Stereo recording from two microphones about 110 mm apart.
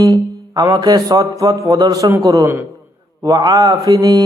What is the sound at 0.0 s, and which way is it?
Speech, 35° right (ahead or behind).